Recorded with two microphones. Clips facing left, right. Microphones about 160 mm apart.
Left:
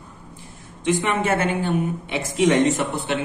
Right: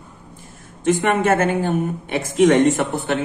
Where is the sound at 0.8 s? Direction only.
55° right (ahead or behind).